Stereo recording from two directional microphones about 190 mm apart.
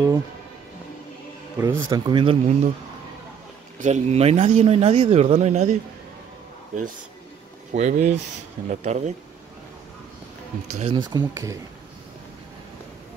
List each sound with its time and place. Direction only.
1.6 s a man's voice: 15° right (ahead or behind)
3.8 s speech: 35° right (ahead or behind)
10.8 s a man's voice: 25° right (ahead or behind)